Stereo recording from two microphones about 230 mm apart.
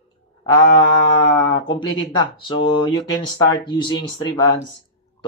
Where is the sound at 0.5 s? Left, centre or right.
Centre.